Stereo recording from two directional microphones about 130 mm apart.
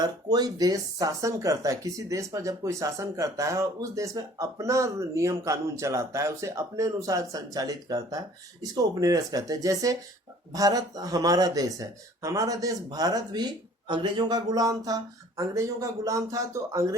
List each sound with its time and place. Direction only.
0.0 s speech: 30° right (ahead or behind)